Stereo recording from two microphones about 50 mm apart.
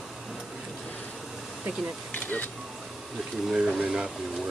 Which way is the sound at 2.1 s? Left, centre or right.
Left.